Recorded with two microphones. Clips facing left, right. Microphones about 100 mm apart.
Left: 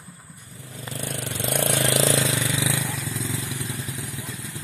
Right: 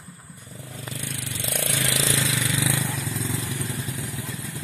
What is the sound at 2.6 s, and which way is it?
Vehicle, 15° left (ahead or behind).